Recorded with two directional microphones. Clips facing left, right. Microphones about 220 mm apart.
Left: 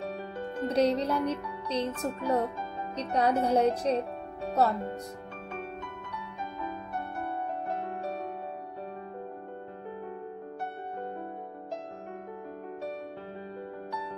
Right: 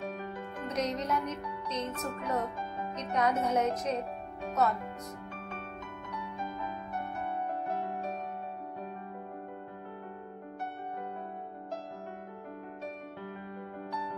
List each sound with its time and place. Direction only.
0.7 s speech: 35° left (ahead or behind)